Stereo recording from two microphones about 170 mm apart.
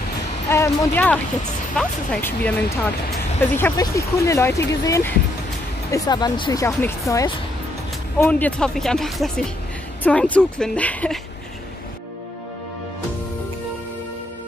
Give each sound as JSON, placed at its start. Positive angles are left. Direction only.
{"t": 0.5, "sound": "speech", "side_deg": 15}